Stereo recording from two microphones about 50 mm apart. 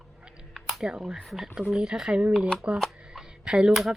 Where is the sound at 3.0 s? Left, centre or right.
Centre.